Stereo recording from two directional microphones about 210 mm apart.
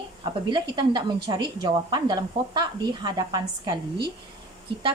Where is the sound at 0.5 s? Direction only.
20° right (ahead or behind).